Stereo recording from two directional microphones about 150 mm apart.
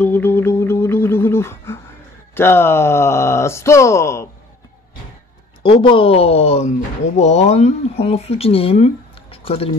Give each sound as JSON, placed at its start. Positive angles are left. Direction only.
{"t": 0.0, "sound": "a sound", "side_deg": 10}
{"t": 2.3, "sound": "speech", "side_deg": 15}
{"t": 5.6, "sound": "speech", "side_deg": 35}